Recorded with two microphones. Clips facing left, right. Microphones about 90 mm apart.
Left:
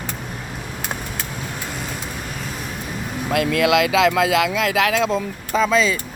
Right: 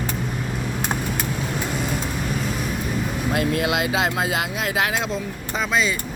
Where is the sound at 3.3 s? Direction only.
90° left.